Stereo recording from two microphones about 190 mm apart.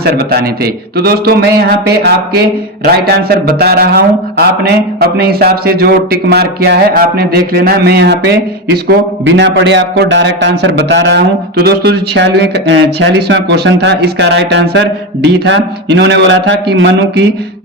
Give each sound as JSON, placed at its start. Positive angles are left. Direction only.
{"t": 0.0, "sound": "speech", "side_deg": -55}